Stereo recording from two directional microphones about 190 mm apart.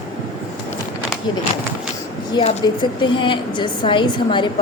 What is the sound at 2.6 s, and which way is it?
A woman's voice, 25° left (ahead or behind).